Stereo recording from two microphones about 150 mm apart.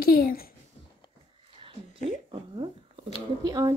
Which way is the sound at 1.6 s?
35° right (ahead or behind).